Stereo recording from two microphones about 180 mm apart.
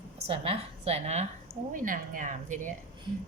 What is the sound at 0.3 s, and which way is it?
A woman's voice, 35° right (ahead or behind).